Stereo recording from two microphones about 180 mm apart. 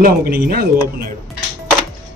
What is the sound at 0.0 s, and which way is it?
A man's voice, 55° right (ahead or behind).